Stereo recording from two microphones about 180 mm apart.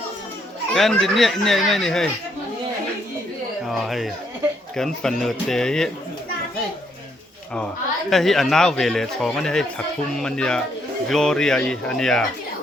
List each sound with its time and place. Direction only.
0.7 s a man's voice: 5° left (ahead or behind)
3.7 s a man's voice: centre (ahead or behind)
8.1 s a man's voice: centre (ahead or behind)